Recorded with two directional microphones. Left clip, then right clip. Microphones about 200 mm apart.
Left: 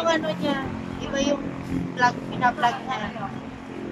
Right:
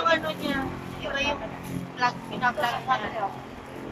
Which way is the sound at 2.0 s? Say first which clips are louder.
Left 4 dB; 35° left (ahead or behind).